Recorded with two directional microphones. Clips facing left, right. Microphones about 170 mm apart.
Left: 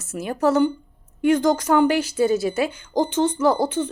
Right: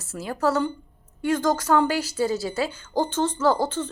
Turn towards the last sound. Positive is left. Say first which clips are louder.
# left 3 dB
turn(degrees=15)  # may be behind; listen again after turning